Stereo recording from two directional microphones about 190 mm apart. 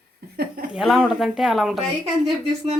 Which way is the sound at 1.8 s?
35° right (ahead or behind).